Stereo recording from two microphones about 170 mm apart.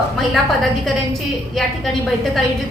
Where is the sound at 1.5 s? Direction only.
Centre (ahead or behind).